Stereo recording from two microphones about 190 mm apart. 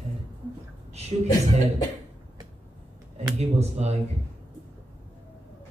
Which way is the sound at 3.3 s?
35° right (ahead or behind).